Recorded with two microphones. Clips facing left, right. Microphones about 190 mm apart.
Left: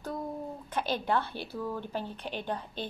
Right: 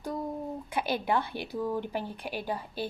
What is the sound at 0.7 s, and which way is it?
Speech, 10° right (ahead or behind).